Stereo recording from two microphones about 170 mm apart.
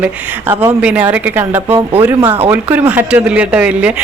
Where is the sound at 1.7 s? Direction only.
35° right (ahead or behind).